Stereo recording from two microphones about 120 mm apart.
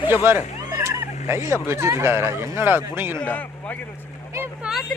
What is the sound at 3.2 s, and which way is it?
Speech, 10° left (ahead or behind).